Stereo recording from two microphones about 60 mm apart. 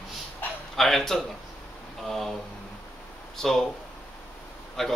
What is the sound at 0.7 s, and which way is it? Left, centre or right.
A man's voice, centre.